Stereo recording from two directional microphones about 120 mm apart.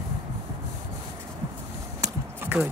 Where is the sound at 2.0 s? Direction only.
20° right (ahead or behind).